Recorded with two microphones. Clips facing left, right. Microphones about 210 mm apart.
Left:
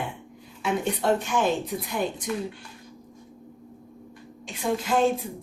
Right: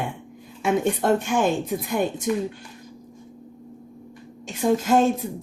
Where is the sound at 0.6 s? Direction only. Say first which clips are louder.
Right 4 dB; 50° right (ahead or behind).